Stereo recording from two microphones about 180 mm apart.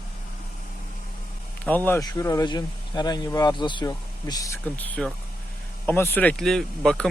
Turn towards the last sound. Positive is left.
turn(degrees=5)  # may be behind; listen again after turning